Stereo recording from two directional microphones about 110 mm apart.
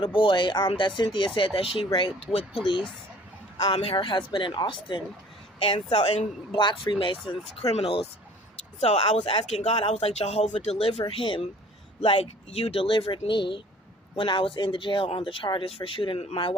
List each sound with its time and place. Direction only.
0.0 s speech: 55° left (ahead or behind)
6.5 s speech: 45° left (ahead or behind)
7.6 s speech: 70° left (ahead or behind)
8.8 s speech: 80° left
11.1 s speech: 55° left (ahead or behind)